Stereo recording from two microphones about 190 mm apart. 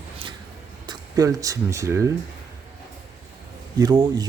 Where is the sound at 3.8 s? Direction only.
20° right (ahead or behind).